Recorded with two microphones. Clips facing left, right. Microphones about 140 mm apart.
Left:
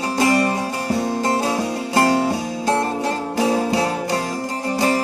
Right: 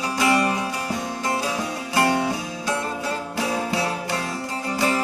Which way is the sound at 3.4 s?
35° left (ahead or behind).